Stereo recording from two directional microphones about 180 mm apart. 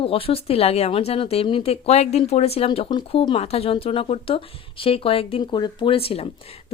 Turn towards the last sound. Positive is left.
turn(degrees=35)  # may be behind; listen again after turning